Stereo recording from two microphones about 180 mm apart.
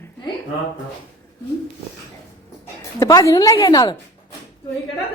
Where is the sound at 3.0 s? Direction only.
20° left (ahead or behind).